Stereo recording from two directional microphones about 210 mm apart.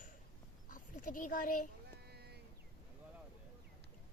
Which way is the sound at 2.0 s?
50° right (ahead or behind).